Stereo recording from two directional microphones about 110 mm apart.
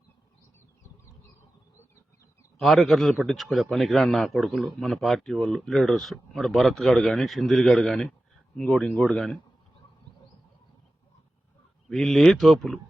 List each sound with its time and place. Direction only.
2.6 s a man's voice: centre (ahead or behind)
11.9 s a man's voice: 5° left (ahead or behind)